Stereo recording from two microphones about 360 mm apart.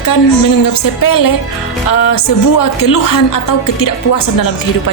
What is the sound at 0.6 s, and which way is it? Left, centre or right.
Speech, left.